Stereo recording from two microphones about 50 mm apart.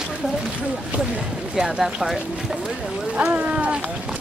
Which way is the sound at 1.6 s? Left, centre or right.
Centre.